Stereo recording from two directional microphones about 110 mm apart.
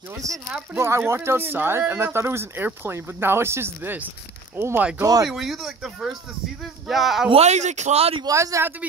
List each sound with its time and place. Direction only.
0.2 s speech: 30° right (ahead or behind)
5.0 s speech: 35° right (ahead or behind)
5.3 s speech: centre (ahead or behind)
7.2 s speech: 80° right
8.2 s speech: 30° right (ahead or behind)